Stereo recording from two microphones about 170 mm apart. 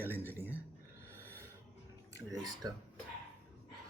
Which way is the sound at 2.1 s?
20° right (ahead or behind).